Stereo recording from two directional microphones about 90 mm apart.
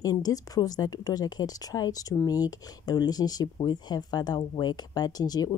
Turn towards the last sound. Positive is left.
turn(degrees=45)  # may be behind; listen again after turning